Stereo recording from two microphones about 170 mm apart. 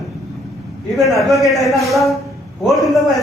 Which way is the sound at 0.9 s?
Centre (ahead or behind).